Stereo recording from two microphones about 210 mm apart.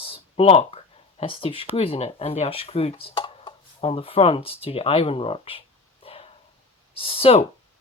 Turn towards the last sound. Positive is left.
turn(degrees=30)  # may be behind; listen again after turning